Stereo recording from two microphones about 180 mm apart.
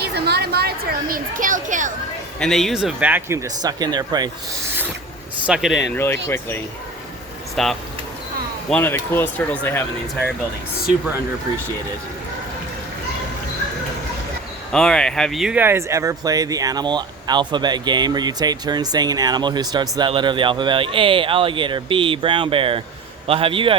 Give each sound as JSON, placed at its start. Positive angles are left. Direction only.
{"t": 0.0, "sound": "a woman's voice", "side_deg": -65}
{"t": 2.4, "sound": "speech", "side_deg": 0}
{"t": 5.5, "sound": "speech", "side_deg": 0}
{"t": 5.9, "sound": "speech", "side_deg": 15}
{"t": 7.5, "sound": "speech", "side_deg": 0}
{"t": 14.7, "sound": "a man's voice", "side_deg": 5}